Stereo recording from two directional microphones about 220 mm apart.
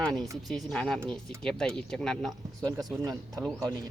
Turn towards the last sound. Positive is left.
turn(degrees=5)  # may be behind; listen again after turning